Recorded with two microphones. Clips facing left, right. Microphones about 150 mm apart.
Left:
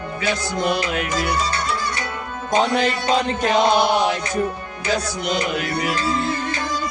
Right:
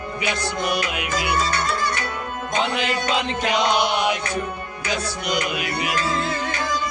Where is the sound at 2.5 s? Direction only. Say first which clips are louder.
Left 5 dB; 40° left (ahead or behind).